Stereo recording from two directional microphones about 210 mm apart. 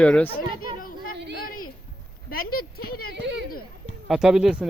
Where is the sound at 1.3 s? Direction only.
40° left (ahead or behind).